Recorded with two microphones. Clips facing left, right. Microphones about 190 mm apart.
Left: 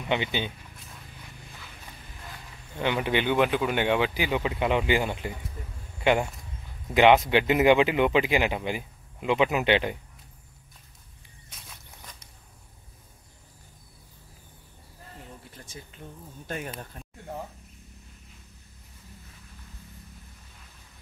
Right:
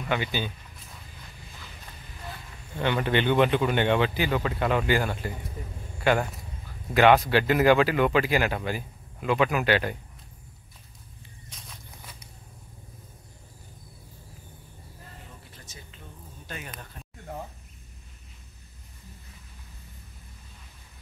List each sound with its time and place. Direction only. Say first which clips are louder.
0.1 s speech: left 1 dB; 20° left (ahead or behind)
2.8 s speech: right 1 dB; 10° left (ahead or behind)
6.9 s speech: even; 15° left (ahead or behind)
15.7 s a sound: left 6 dB; 50° left (ahead or behind)
16.4 s speech: left 6 dB; 45° left (ahead or behind)